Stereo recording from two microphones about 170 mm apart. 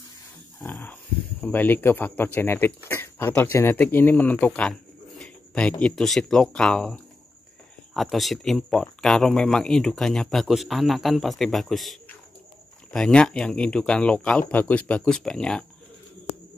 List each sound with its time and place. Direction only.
0.6 s speech: 10° left (ahead or behind)